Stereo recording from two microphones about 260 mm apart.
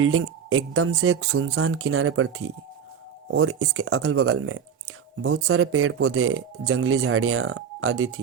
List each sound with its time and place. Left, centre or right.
0.0 s speech: right